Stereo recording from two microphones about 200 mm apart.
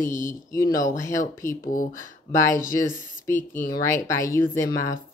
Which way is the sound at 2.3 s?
15° left (ahead or behind).